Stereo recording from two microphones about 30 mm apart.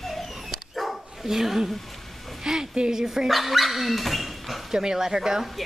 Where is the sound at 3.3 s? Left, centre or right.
Centre.